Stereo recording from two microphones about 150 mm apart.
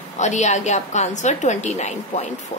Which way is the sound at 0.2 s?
50° left (ahead or behind).